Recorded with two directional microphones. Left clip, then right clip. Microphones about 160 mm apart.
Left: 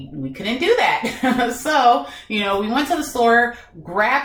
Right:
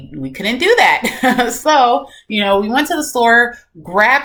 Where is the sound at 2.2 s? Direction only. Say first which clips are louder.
Right 7 dB; 15° right (ahead or behind).